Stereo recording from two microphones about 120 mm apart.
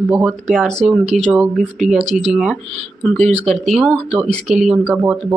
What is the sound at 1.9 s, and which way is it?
Speech, 75° right (ahead or behind).